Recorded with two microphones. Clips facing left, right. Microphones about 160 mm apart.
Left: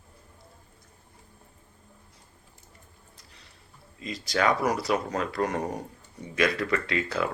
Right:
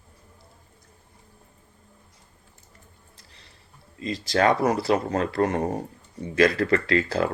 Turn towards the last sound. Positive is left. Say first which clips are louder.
# right 5 dB
turn(degrees=-35)  # may be behind; listen again after turning